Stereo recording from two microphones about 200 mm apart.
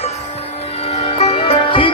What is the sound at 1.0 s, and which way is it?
Music, 30° left (ahead or behind).